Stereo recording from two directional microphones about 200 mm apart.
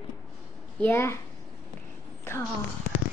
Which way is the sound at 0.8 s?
10° left (ahead or behind).